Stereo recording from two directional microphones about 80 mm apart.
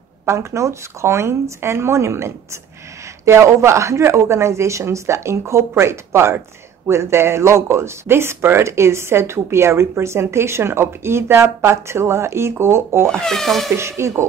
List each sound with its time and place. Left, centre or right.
0.2 s speech: right
13.1 s speech: centre
13.7 s speech: right